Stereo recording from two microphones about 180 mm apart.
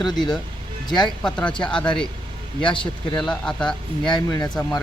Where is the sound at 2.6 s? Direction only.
25° left (ahead or behind).